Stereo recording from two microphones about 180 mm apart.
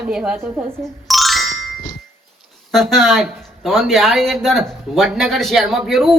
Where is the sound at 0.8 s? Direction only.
Centre (ahead or behind).